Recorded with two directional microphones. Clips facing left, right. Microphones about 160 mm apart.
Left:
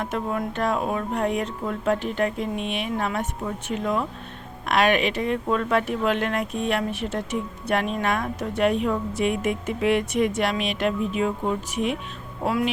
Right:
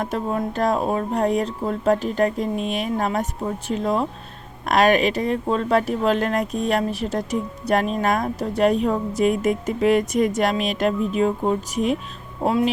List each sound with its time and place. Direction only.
0.0 s speech: 35° right (ahead or behind)